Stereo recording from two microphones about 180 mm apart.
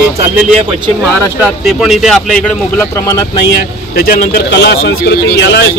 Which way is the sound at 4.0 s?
60° left (ahead or behind).